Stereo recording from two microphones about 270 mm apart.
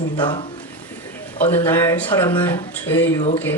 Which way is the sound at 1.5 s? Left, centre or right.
Centre.